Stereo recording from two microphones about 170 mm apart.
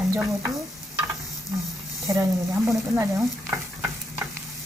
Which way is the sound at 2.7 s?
15° right (ahead or behind).